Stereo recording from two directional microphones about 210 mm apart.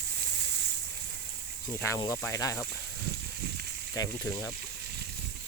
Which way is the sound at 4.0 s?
15° left (ahead or behind).